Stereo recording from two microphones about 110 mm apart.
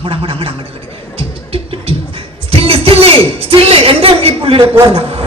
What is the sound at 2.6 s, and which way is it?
A woman's voice, 60° right (ahead or behind).